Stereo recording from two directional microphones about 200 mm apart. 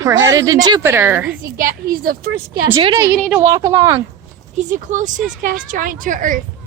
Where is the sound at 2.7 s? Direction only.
25° right (ahead or behind).